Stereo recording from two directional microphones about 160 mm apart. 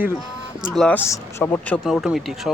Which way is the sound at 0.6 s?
5° left (ahead or behind).